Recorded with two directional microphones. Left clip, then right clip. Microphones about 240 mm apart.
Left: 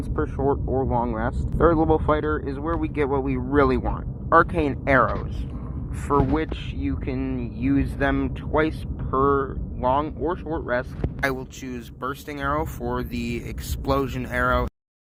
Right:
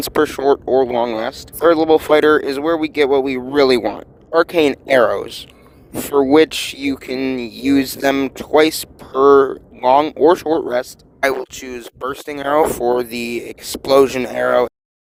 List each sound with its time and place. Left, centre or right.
0.2 s speech: right